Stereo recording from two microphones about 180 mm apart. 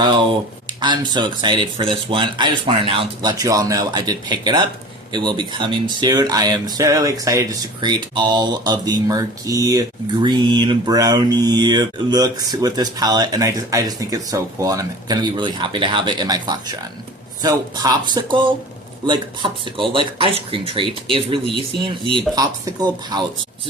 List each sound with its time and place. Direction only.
0.8 s speech: 25° right (ahead or behind)